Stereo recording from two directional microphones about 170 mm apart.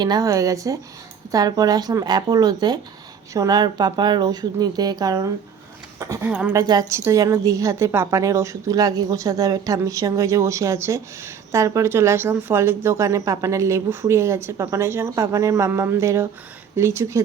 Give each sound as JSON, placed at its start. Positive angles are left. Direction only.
{"t": 0.0, "sound": "a woman's voice", "side_deg": -20}